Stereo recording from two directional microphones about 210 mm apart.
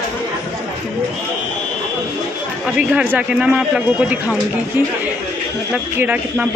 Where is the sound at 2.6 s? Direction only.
5° right (ahead or behind).